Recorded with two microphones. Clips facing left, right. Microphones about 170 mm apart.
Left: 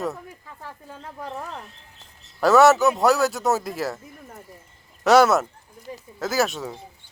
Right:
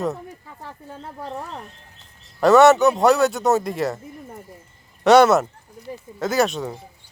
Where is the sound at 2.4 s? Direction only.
Centre (ahead or behind).